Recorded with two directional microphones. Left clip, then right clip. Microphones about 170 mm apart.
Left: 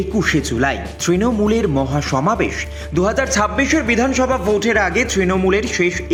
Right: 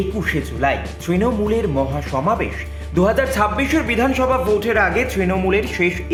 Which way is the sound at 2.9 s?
25° left (ahead or behind).